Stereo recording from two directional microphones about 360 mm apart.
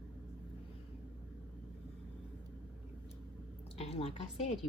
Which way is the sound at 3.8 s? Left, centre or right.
Centre.